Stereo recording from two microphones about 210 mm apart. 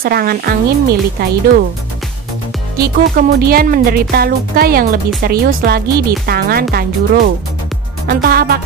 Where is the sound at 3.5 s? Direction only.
45° right (ahead or behind).